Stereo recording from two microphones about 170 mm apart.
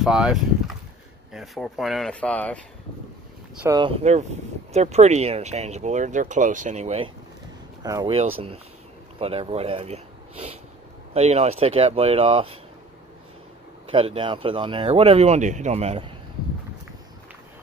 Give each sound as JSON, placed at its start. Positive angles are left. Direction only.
{"t": 0.0, "sound": "speech", "side_deg": 0}
{"t": 3.6, "sound": "speech", "side_deg": -25}
{"t": 4.0, "sound": "speech", "side_deg": -45}
{"t": 7.8, "sound": "speech", "side_deg": -20}
{"t": 8.1, "sound": "speech", "side_deg": -35}
{"t": 13.8, "sound": "speech", "side_deg": -35}